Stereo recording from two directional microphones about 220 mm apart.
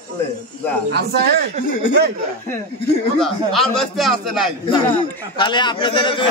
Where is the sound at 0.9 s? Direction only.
45° right (ahead or behind).